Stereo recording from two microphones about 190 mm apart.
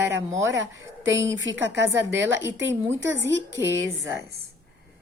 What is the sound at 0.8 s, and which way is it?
A woman's voice, 85° right.